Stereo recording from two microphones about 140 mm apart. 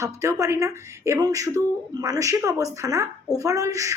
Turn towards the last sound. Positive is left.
turn(degrees=-25)  # may be behind; listen again after turning